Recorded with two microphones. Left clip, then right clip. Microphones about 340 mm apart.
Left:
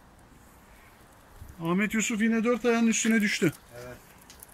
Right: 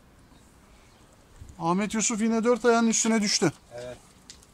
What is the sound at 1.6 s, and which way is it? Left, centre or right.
Speech, centre.